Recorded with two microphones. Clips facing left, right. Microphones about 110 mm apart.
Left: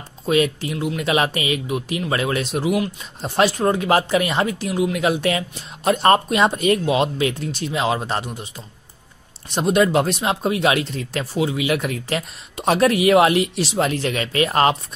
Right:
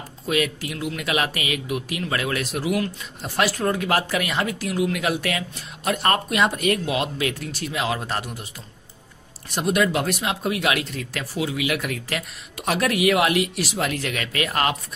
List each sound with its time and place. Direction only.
0.3 s speech: 30° left (ahead or behind)
9.5 s speech: 25° left (ahead or behind)